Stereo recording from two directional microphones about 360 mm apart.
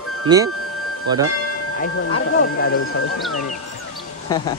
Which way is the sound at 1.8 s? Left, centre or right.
Left.